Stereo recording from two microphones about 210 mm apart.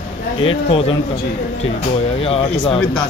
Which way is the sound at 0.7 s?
25° left (ahead or behind).